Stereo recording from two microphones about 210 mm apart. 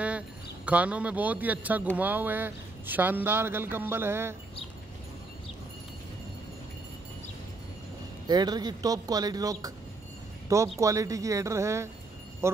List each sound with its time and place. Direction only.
0.7 s a man's voice: 5° right (ahead or behind)
8.3 s a man's voice: 20° right (ahead or behind)